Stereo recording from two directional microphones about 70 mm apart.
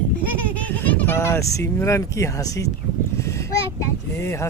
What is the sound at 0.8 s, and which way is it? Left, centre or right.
Speech, left.